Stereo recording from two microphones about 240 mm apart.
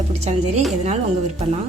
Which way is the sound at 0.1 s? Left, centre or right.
Right.